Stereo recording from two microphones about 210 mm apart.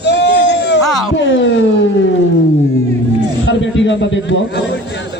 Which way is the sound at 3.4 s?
60° left (ahead or behind).